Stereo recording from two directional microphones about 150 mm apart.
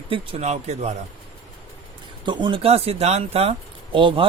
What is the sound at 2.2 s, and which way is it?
Speech, 30° right (ahead or behind).